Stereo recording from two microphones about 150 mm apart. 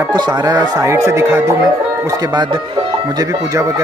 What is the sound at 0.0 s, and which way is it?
Music, 25° right (ahead or behind).